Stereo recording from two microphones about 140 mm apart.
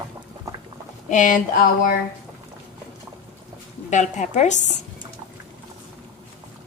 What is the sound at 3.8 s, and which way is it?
Dishes, 55° left (ahead or behind).